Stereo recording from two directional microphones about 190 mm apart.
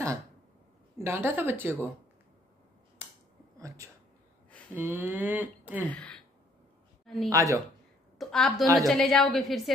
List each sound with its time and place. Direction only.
0.9 s speech: 15° right (ahead or behind)
3.5 s a sound: 15° right (ahead or behind)
4.7 s speech: 10° right (ahead or behind)
5.9 s a sound: 5° left (ahead or behind)
7.2 s speech: 15° right (ahead or behind)
8.2 s a woman's voice: centre (ahead or behind)